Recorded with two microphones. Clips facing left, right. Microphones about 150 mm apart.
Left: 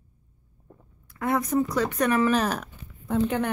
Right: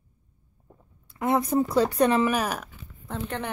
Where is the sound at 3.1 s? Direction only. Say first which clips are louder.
Left 8 dB; centre (ahead or behind).